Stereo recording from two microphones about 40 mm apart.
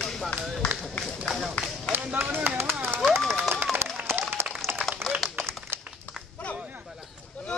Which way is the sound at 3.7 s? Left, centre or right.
Right.